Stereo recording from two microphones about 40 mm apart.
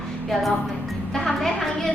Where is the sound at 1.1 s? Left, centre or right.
Centre.